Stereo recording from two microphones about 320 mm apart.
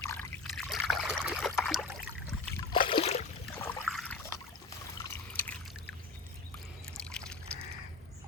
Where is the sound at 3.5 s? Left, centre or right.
Centre.